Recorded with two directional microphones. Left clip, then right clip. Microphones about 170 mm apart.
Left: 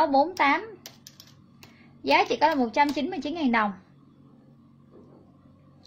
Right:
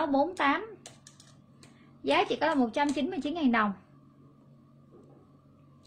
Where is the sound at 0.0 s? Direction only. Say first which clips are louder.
Left 6 dB; 15° right (ahead or behind).